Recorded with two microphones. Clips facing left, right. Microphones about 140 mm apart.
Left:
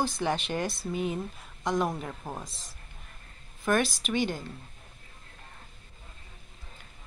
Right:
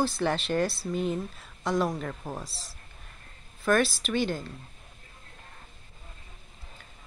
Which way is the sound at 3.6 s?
20° left (ahead or behind).